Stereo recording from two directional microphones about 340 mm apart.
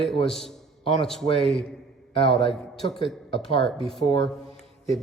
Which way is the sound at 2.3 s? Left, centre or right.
Centre.